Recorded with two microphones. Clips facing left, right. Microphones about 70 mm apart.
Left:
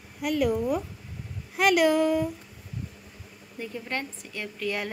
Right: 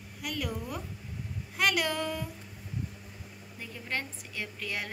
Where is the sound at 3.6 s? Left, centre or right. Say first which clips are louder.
Left 4 dB; centre.